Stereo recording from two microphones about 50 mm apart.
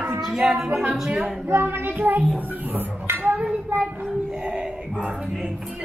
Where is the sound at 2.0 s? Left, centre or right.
Right.